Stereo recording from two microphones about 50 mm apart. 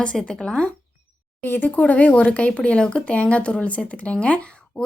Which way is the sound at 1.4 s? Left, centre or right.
Left.